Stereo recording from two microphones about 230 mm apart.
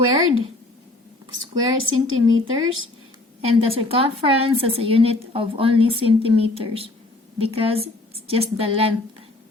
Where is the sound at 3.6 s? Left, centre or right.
Right.